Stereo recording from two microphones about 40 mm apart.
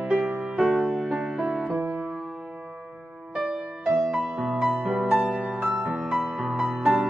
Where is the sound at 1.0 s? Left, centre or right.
Centre.